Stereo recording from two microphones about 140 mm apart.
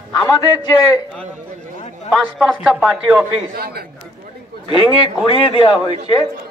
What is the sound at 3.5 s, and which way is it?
Speech, 90° right.